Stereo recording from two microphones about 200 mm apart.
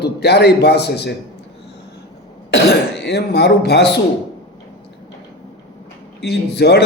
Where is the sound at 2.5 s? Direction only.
55° left (ahead or behind).